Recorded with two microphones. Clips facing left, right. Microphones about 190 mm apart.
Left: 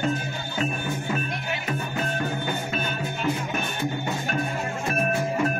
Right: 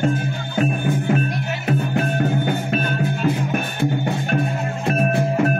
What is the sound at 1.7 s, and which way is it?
Music, 65° right (ahead or behind).